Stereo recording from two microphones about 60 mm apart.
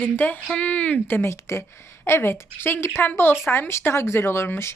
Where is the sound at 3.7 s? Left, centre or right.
Left.